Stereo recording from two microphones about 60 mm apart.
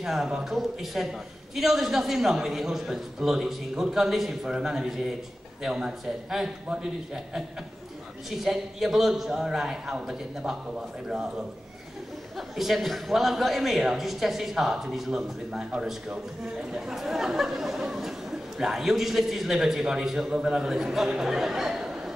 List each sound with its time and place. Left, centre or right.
0.0 s a man's voice: centre
8.3 s a man's voice: centre
12.4 s a man's voice: centre